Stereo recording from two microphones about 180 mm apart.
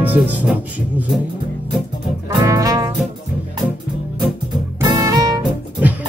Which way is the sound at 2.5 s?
20° right (ahead or behind).